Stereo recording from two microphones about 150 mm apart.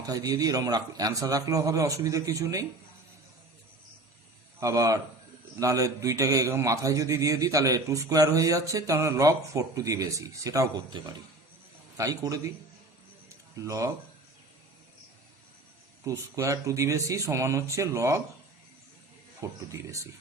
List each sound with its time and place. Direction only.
0.0 s a man's voice: 25° right (ahead or behind)
4.6 s a man's voice: 20° right (ahead or behind)
13.6 s a man's voice: 20° right (ahead or behind)
16.0 s a man's voice: 20° right (ahead or behind)
19.4 s a man's voice: 20° right (ahead or behind)